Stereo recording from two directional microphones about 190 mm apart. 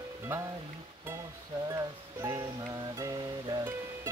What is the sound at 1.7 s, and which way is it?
Music, 15° right (ahead or behind).